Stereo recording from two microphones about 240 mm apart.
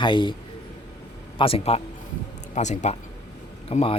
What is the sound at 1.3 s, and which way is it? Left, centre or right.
Speech, left.